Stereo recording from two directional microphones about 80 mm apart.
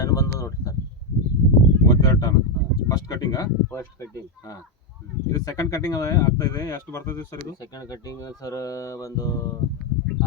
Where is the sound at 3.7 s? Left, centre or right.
Left.